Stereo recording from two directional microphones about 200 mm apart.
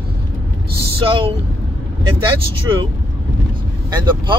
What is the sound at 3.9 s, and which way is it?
Speech, 20° right (ahead or behind).